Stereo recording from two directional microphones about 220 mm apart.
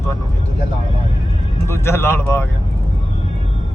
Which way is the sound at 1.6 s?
10° left (ahead or behind).